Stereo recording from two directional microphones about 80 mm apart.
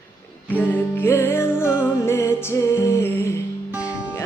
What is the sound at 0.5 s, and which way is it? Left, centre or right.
Music, left.